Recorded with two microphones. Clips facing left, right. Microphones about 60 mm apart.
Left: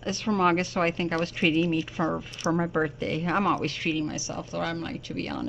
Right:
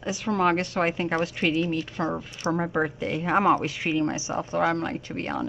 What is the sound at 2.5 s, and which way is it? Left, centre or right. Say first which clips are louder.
A woman's voice: even; centre.